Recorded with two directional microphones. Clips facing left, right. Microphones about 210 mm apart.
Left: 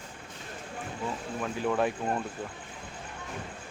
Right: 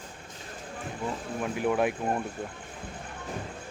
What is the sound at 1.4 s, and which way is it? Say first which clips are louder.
Speech: right 2 dB; 15° right (ahead or behind).